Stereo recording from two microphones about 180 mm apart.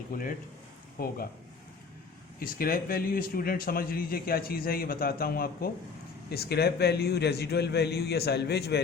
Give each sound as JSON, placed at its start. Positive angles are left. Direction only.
{"t": 0.1, "sound": "a man's voice", "side_deg": 50}
{"t": 2.4, "sound": "a man's voice", "side_deg": 55}